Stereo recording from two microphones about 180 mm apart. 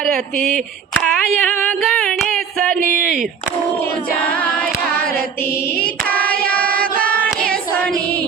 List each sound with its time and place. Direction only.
0.5 s a sound: 5° left (ahead or behind)
2.7 s speech: 50° right (ahead or behind)
4.3 s singing: 10° left (ahead or behind)
6.1 s singing: 10° left (ahead or behind)
7.5 s child singing: 5° left (ahead or behind)